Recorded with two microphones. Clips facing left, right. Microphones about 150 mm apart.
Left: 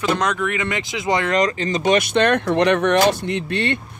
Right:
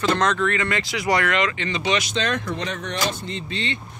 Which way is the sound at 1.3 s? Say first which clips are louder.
Left 4 dB; 40° left (ahead or behind).